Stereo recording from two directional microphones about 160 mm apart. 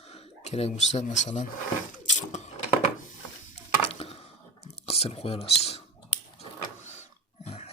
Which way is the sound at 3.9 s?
40° left (ahead or behind).